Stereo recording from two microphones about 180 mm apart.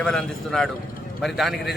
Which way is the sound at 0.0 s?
5° left (ahead or behind).